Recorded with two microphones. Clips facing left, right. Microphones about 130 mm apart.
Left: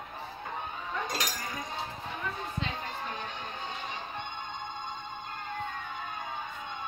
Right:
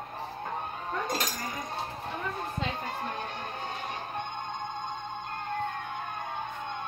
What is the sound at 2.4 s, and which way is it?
Music, 50° right (ahead or behind).